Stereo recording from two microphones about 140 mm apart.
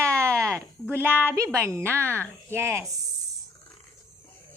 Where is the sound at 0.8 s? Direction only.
15° right (ahead or behind).